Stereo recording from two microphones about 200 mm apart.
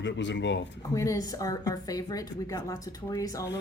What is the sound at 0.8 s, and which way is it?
A woman's voice, 15° left (ahead or behind).